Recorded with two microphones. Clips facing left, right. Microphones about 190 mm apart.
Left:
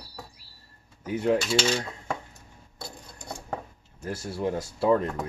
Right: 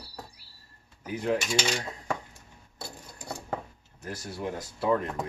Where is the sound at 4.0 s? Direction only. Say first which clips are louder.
Left 5 dB; 25° left (ahead or behind).